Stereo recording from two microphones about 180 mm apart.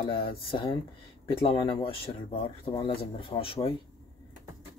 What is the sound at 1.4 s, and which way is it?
Speech, 30° left (ahead or behind).